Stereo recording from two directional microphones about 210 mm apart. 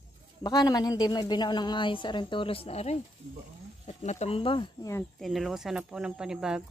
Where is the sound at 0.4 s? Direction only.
20° left (ahead or behind).